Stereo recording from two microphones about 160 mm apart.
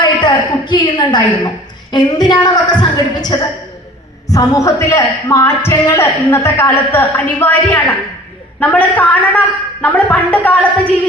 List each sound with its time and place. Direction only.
0.0 s a woman's voice: 30° left (ahead or behind); by 10.9 s 10° left (ahead or behind)